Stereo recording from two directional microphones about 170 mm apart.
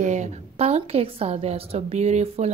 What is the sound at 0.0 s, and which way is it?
A woman's voice, 45° right (ahead or behind).